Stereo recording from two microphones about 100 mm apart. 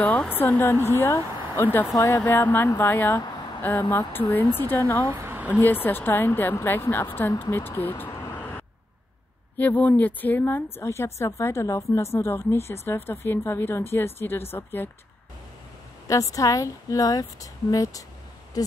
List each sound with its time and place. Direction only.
0.0 s speech: 15° left (ahead or behind)
5.0 s a woman's voice: 25° right (ahead or behind)
5.6 s speech: 20° left (ahead or behind)
8.4 s vehicle: 15° left (ahead or behind)
9.6 s a woman's voice: 15° left (ahead or behind)
16.1 s speech: 35° left (ahead or behind)